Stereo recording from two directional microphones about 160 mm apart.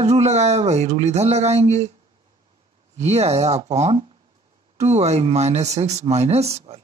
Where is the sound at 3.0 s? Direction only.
40° right (ahead or behind).